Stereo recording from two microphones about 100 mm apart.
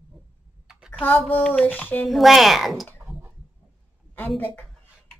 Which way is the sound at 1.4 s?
10° left (ahead or behind).